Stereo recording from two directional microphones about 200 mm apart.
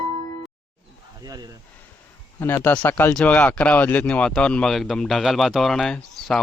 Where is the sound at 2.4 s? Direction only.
10° left (ahead or behind).